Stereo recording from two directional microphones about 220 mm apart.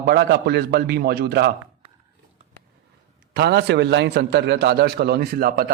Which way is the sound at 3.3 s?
50° right (ahead or behind).